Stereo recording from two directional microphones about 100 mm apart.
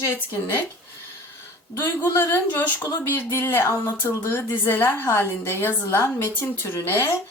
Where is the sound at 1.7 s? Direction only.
25° left (ahead or behind).